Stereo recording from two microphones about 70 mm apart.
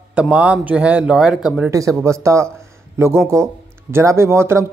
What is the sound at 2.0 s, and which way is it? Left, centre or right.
Speech, right.